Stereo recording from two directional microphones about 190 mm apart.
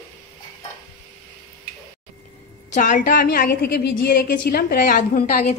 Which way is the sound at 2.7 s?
40° left (ahead or behind).